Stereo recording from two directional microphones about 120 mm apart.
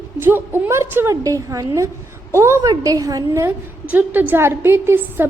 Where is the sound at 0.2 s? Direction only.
15° right (ahead or behind).